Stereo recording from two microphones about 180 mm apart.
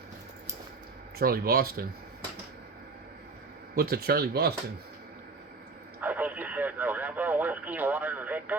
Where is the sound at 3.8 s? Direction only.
60° right (ahead or behind).